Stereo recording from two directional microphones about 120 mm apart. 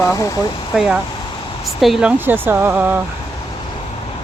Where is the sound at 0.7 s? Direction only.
5° right (ahead or behind).